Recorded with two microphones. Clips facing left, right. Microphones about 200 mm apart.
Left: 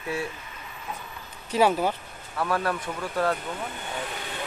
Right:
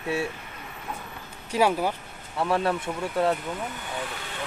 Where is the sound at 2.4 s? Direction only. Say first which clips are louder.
Right 2 dB; 25° right (ahead or behind).